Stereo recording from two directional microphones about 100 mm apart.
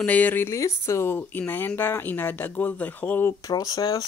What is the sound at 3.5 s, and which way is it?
Speech, 40° left (ahead or behind).